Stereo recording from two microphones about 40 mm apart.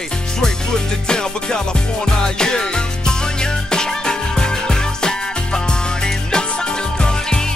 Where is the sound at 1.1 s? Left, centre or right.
Centre.